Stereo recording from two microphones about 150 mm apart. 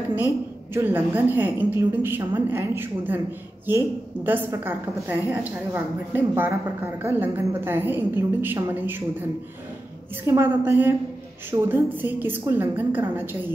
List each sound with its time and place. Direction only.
0.7 s a woman's voice: 15° right (ahead or behind)
10.2 s a woman's voice: 15° right (ahead or behind)